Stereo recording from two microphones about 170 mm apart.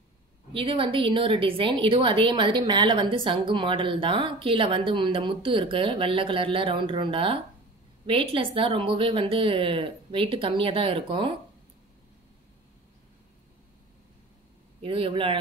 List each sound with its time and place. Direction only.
0.5 s a woman's voice: 30° right (ahead or behind)
14.8 s a woman's voice: 30° right (ahead or behind)